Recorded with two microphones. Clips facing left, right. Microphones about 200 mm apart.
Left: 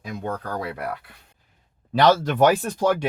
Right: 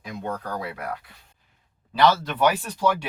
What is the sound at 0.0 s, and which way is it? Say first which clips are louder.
Speech: left 2 dB; 50° left (ahead or behind).